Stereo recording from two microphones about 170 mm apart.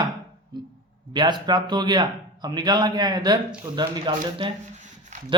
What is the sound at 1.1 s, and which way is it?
Speech, 25° right (ahead or behind).